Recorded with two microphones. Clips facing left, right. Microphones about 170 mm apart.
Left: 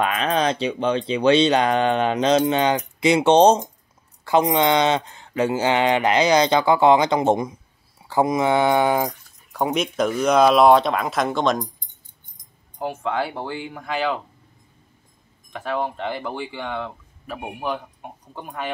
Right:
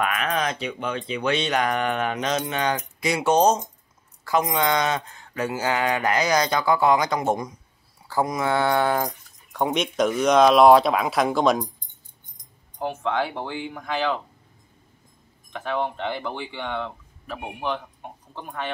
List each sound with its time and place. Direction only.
0.0 s speech: 30° left (ahead or behind); by 11.6 s centre (ahead or behind)
12.7 s speech: 5° left (ahead or behind)
15.5 s speech: 5° left (ahead or behind)